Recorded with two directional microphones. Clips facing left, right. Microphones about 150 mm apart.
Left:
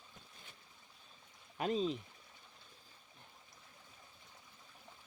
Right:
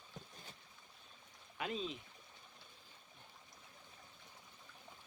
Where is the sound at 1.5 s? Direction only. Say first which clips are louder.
Left 7 dB; 40° left (ahead or behind).